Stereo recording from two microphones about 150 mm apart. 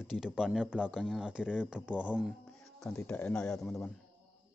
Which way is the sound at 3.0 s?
10° left (ahead or behind).